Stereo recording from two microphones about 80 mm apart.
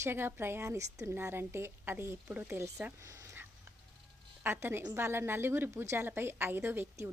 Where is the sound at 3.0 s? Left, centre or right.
Right.